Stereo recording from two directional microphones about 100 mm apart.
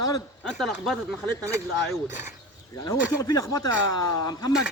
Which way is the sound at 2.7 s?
35° left (ahead or behind).